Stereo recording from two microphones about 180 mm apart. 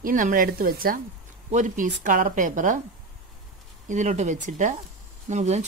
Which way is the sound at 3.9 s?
40° right (ahead or behind).